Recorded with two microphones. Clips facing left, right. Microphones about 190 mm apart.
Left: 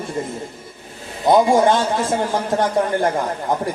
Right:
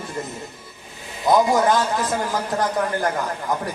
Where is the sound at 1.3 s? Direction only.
25° left (ahead or behind).